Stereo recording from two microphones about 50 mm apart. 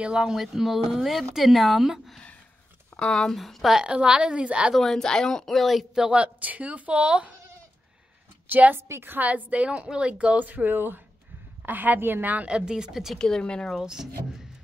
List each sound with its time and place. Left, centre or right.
0.0 s speech: centre
3.0 s speech: centre
3.3 s speech: centre
3.8 s speech: centre
4.7 s speech: centre
5.9 s speech: centre
6.2 s speech: right
8.5 s a woman's voice: right
8.7 s a woman's voice: right
9.2 s speech: right
10.5 s a woman's voice: right
12.4 s speech: centre
13.2 s speech: centre